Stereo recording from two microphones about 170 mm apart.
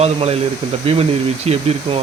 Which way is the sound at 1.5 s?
35° right (ahead or behind).